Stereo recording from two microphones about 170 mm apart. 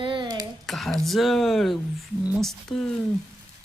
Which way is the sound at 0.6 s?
Centre (ahead or behind).